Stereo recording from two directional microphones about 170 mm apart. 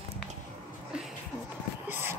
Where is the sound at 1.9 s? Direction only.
15° right (ahead or behind).